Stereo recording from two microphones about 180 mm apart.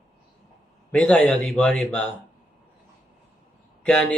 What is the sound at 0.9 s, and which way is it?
A man's voice, 5° left (ahead or behind).